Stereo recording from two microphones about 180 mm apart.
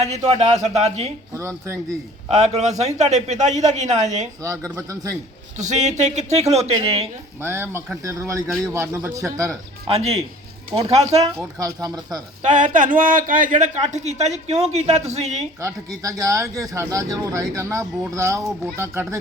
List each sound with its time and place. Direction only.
0.0 s speech: 40° right (ahead or behind)
1.4 s speech: 15° right (ahead or behind)
2.4 s speech: 40° right (ahead or behind)
4.4 s speech: 20° right (ahead or behind)
5.5 s speech: 40° right (ahead or behind)
7.4 s speech: 15° right (ahead or behind)
9.8 s speech: 35° right (ahead or behind)
11.6 s speech: 20° right (ahead or behind)
12.4 s speech: 45° right (ahead or behind)
16.0 s speech: 20° right (ahead or behind)